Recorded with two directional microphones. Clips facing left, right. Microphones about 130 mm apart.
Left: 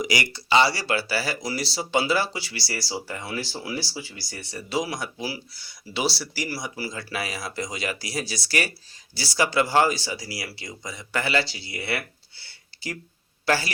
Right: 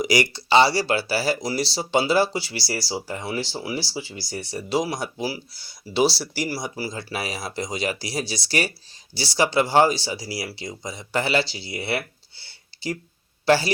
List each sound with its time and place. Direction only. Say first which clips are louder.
0.0 s a man's voice: right 5 dB; 35° right (ahead or behind)